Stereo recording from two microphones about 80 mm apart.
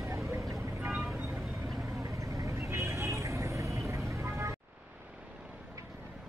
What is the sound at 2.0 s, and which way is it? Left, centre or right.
Vehicle, right.